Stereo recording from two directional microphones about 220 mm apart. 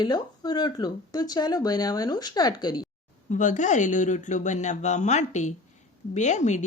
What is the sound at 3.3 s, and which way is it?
Speech, 35° left (ahead or behind).